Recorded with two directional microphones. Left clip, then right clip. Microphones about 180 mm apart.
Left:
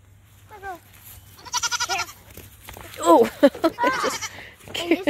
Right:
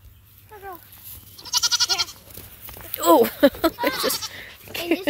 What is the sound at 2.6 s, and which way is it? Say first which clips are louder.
Livestock: even; centre (ahead or behind).